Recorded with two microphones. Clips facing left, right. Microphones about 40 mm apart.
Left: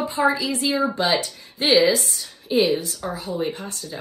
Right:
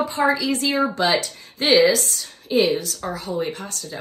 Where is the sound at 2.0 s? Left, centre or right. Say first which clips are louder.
Right 1 dB; left.